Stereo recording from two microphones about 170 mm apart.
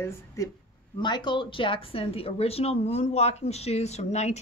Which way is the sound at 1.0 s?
25° left (ahead or behind).